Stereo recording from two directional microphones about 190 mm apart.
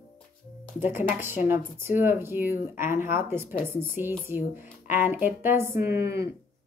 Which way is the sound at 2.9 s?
45° left (ahead or behind).